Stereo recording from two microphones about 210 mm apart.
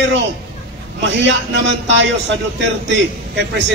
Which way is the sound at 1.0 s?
55° right (ahead or behind).